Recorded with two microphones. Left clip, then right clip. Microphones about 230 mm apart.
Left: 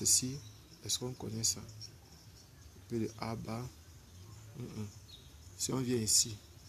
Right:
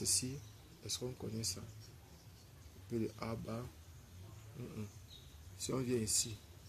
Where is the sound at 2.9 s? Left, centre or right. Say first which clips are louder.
Left 3 dB; centre.